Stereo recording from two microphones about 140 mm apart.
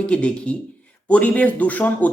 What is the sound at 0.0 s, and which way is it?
A man's voice, 10° left (ahead or behind).